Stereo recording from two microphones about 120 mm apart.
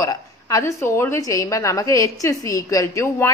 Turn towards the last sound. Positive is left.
turn(degrees=25)  # may be behind; listen again after turning